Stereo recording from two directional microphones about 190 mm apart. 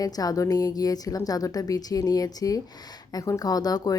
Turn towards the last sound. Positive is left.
turn(degrees=20)  # may be behind; listen again after turning